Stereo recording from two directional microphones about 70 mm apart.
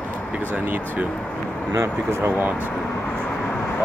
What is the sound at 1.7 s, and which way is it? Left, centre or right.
Speech, right.